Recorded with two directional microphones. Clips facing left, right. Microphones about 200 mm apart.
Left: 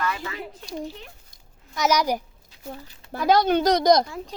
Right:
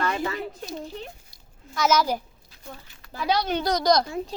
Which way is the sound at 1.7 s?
15° left (ahead or behind).